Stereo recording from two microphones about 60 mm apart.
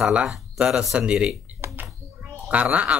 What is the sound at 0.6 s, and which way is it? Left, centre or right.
Speech, centre.